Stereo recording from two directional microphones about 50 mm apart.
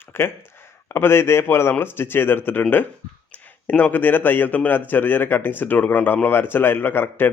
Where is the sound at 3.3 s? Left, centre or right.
Left.